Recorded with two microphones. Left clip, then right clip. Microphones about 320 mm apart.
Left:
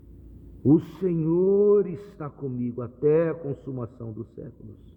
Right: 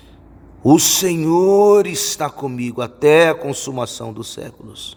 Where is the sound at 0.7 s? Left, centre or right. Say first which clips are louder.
Right 9 dB; centre.